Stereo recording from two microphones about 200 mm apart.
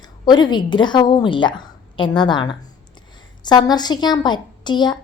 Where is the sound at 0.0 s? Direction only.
20° left (ahead or behind).